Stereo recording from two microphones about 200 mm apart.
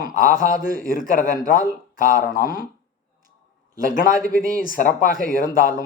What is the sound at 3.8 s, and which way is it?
A man's voice, 40° left (ahead or behind).